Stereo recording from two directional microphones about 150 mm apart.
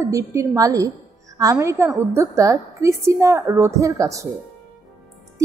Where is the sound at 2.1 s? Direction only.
20° right (ahead or behind).